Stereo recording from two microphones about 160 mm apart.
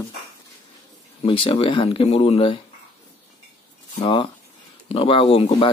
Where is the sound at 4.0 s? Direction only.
30° left (ahead or behind).